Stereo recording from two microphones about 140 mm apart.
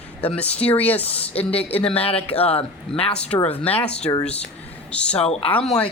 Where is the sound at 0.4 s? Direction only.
45° left (ahead or behind).